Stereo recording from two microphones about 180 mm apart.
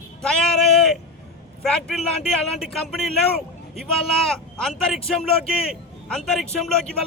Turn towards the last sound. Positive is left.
turn(degrees=5)  # may be behind; listen again after turning